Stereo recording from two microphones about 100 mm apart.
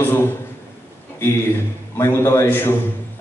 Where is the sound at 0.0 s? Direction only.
20° left (ahead or behind).